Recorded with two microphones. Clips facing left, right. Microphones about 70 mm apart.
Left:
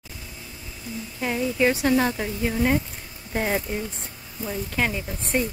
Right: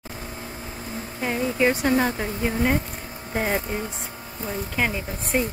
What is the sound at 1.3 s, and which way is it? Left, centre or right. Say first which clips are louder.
A woman's voice: even; right.